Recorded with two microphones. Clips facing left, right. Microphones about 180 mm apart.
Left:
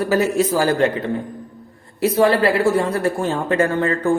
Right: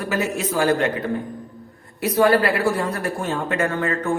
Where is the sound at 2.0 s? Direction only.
30° left (ahead or behind).